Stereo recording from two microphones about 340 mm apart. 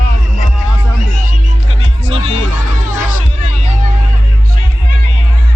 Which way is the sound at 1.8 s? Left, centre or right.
Left.